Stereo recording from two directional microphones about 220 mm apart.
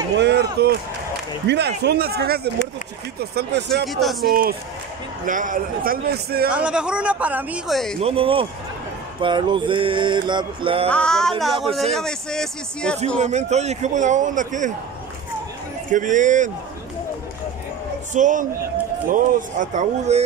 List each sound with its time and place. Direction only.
0.2 s speech: 50° right (ahead or behind)
3.8 s speech: centre (ahead or behind)
4.3 s speech: 40° right (ahead or behind)
6.5 s speech: 5° right (ahead or behind)
8.0 s a sound: 25° right (ahead or behind)
10.9 s speech: 5° left (ahead or behind)
13.2 s speech: 30° right (ahead or behind)
15.9 s speech: 35° right (ahead or behind)
18.1 s speech: 35° right (ahead or behind)